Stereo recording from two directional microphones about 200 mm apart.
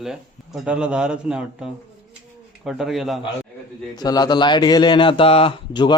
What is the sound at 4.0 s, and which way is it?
A man's voice, 20° left (ahead or behind).